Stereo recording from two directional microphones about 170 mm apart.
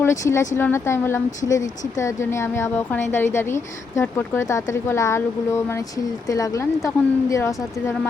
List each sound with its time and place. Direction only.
0.0 s a woman's voice: 15° left (ahead or behind)